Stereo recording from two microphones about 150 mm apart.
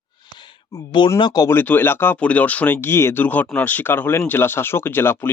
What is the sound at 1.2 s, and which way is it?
Speech, 30° left (ahead or behind).